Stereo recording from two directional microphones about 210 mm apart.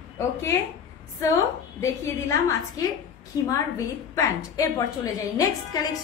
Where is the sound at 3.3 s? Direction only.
15° left (ahead or behind).